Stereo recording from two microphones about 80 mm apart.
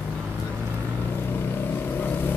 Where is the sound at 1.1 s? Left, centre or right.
Left.